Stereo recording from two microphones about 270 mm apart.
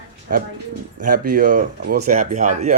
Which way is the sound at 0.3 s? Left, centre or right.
Right.